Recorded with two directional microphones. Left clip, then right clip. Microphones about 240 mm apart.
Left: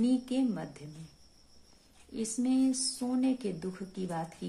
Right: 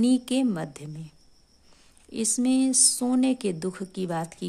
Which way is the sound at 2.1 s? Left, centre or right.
Right.